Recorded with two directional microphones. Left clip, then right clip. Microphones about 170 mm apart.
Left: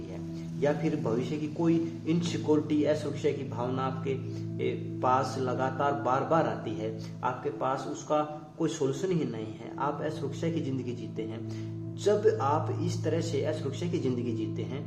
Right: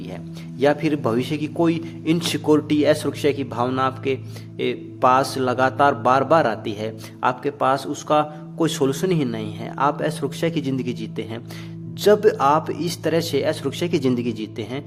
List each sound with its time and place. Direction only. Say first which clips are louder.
0.6 s a man's voice: right 10 dB; 50° right (ahead or behind)
12.0 s a man's voice: right 10 dB; 55° right (ahead or behind)